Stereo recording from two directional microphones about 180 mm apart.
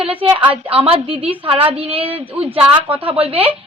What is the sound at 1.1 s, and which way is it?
Speech, 10° right (ahead or behind).